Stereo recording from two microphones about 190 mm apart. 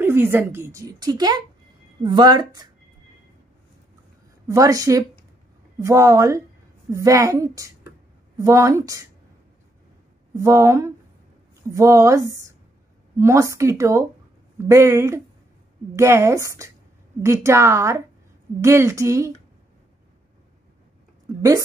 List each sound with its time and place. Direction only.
0.0 s a woman's voice: 10° right (ahead or behind)
4.5 s a woman's voice: 15° right (ahead or behind)
10.3 s a woman's voice: 15° right (ahead or behind)